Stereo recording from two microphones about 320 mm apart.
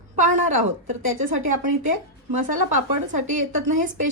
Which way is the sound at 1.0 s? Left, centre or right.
Right.